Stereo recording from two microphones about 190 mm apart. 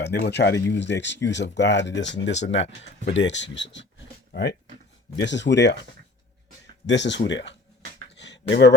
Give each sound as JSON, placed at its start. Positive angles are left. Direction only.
{"t": 0.0, "sound": "speech", "side_deg": 60}
{"t": 6.8, "sound": "speech", "side_deg": 70}
{"t": 8.2, "sound": "a sound", "side_deg": 65}